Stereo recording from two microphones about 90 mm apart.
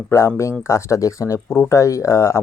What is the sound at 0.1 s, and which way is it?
Speech, 30° left (ahead or behind).